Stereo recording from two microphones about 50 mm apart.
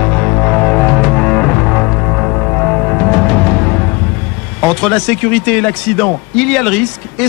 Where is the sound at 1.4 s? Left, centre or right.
Centre.